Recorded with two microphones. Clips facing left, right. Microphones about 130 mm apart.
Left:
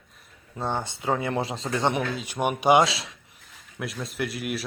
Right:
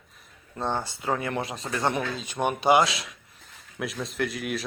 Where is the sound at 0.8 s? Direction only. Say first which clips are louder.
Left 2 dB; 20° left (ahead or behind).